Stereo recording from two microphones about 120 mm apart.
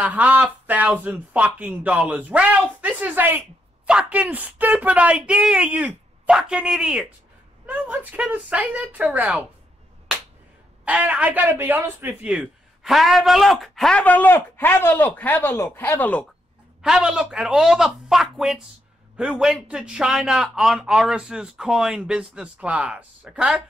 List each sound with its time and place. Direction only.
0.0 s speech: 10° right (ahead or behind)
10.9 s speech: 10° right (ahead or behind)
12.2 s a man's voice: 10° right (ahead or behind); by 16.3 s 15° left (ahead or behind)
16.8 s speech: 5° right (ahead or behind)